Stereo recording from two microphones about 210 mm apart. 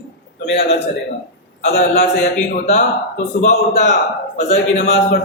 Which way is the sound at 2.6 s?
35° left (ahead or behind).